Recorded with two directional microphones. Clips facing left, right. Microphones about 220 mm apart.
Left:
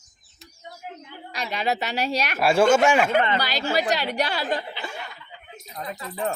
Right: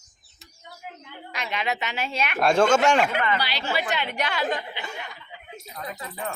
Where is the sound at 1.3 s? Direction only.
35° left (ahead or behind).